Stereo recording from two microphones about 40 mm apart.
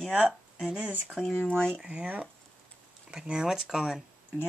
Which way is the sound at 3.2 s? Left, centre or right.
Right.